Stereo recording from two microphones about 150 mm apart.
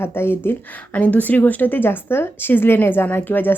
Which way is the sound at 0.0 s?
15° left (ahead or behind).